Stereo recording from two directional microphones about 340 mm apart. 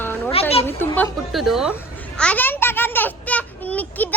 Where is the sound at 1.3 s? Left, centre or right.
Centre.